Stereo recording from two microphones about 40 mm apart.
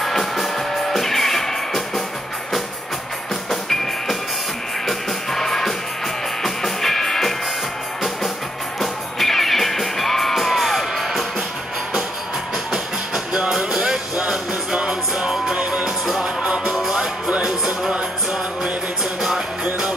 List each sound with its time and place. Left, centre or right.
0.0 s music: centre
3.6 s music: centre
8.7 s music: centre
12.7 s music: centre
17.4 s music: centre